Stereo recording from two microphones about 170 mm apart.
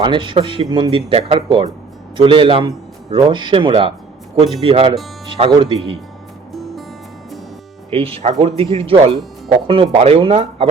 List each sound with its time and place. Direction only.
0.0 s a man's voice: 30° right (ahead or behind)
6.5 s music: centre (ahead or behind)
7.9 s a man's voice: 35° right (ahead or behind)